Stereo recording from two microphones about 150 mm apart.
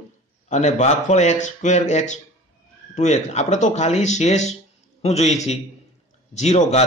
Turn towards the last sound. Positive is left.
turn(degrees=45)  # may be behind; listen again after turning